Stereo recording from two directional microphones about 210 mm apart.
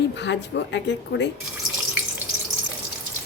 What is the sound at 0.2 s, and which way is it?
Speech, 55° left (ahead or behind).